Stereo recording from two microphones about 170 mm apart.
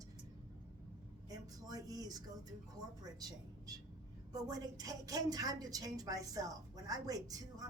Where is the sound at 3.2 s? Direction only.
25° right (ahead or behind).